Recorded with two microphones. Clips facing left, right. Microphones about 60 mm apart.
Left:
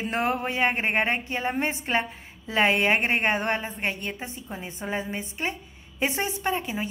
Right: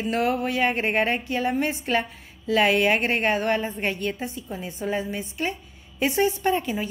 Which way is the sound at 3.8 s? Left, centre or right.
Centre.